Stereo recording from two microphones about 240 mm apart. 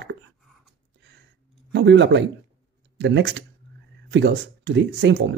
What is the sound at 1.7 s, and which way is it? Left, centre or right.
Speech, right.